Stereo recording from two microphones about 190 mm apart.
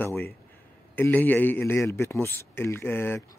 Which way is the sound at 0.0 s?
10° left (ahead or behind).